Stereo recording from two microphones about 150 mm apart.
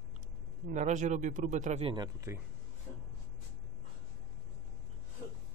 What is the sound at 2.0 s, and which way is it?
Speech, 20° right (ahead or behind).